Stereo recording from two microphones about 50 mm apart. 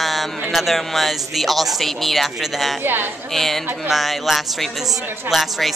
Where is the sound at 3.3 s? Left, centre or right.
Centre.